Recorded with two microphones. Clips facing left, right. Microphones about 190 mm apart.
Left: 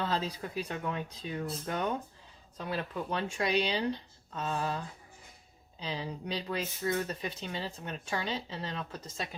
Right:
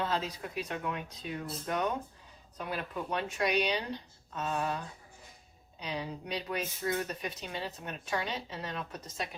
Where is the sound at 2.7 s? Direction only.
30° left (ahead or behind).